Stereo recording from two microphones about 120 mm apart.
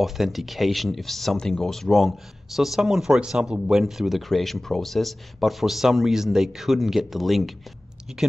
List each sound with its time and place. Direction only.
0.0 s speech: centre (ahead or behind)